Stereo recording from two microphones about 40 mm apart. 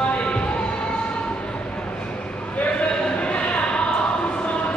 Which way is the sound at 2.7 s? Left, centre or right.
Left.